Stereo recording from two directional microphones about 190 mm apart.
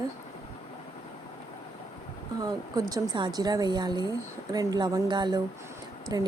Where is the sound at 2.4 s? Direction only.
20° right (ahead or behind).